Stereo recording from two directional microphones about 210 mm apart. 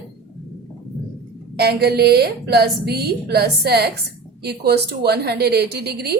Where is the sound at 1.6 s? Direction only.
50° right (ahead or behind).